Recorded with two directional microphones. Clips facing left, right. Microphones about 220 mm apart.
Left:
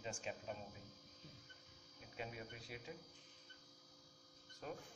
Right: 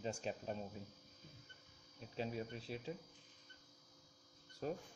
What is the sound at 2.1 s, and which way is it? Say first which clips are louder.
Speech: right 7 dB; 30° right (ahead or behind).